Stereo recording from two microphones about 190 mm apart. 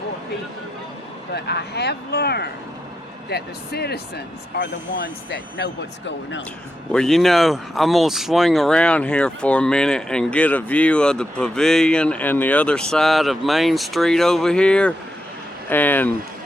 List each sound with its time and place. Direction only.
1.3 s speech: 60° left (ahead or behind)
6.9 s speech: centre (ahead or behind)